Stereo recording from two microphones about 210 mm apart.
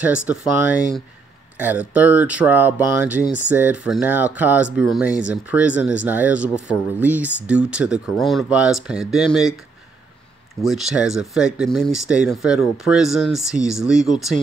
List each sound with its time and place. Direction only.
0.0 s speech: 5° right (ahead or behind)
10.6 s speech: centre (ahead or behind)